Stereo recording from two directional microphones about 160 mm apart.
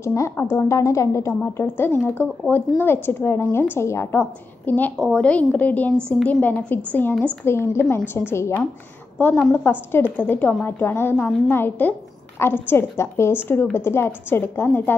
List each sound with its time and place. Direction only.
0.0 s a woman's voice: 20° left (ahead or behind)